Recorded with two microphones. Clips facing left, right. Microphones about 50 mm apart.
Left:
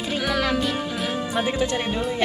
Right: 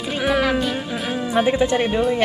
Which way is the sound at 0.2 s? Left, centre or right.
Centre.